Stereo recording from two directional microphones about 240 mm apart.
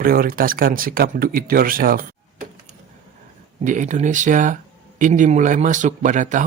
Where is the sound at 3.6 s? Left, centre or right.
Right.